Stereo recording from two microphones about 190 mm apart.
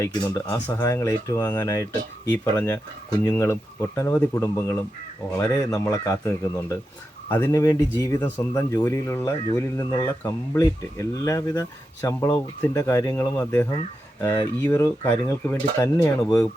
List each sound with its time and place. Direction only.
0.0 s speech: 15° left (ahead or behind)